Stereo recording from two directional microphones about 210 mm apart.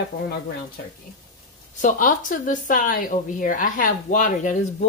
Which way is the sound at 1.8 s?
40° left (ahead or behind).